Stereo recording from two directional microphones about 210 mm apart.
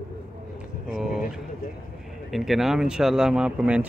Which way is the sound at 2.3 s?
Centre (ahead or behind).